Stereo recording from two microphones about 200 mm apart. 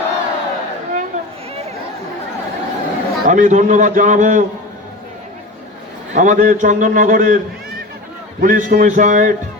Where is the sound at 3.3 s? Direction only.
40° right (ahead or behind).